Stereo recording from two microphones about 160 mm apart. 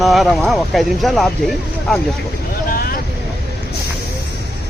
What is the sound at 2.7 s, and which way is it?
Vehicle, 65° left (ahead or behind).